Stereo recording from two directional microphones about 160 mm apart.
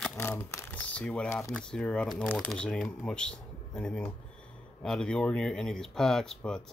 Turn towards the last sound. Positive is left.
turn(degrees=5)  # may be behind; listen again after turning